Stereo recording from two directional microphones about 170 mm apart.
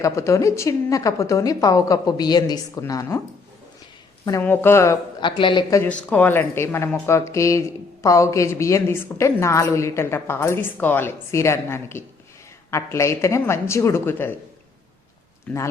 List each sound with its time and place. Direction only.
0.0 s a woman's voice: 20° left (ahead or behind)
4.3 s a woman's voice: 15° left (ahead or behind)
5.2 s a woman's voice: 30° left (ahead or behind)
5.8 s a woman's voice: 10° left (ahead or behind)